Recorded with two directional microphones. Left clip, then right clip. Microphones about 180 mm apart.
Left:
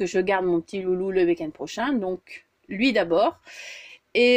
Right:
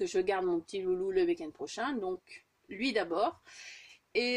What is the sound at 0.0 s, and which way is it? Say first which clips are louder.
Speech: left 8 dB; 30° left (ahead or behind).